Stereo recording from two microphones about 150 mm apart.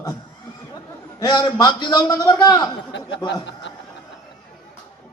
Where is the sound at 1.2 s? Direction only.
30° left (ahead or behind).